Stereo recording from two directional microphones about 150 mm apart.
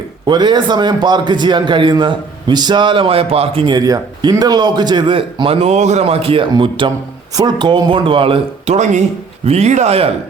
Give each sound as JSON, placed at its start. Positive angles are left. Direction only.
{"t": 0.3, "sound": "a man's voice", "side_deg": -30}